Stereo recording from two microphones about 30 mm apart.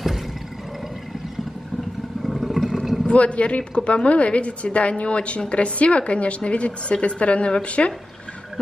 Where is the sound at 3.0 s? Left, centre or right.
Left.